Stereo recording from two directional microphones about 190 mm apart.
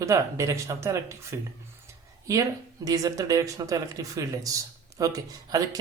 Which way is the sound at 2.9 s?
20° right (ahead or behind).